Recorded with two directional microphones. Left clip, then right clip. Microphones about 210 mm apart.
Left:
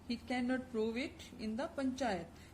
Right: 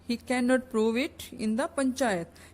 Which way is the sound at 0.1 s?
50° right (ahead or behind).